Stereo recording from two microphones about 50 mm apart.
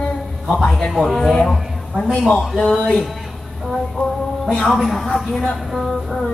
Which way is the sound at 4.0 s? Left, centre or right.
Left.